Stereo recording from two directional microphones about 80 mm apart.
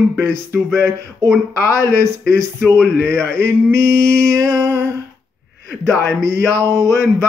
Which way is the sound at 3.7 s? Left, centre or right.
Right.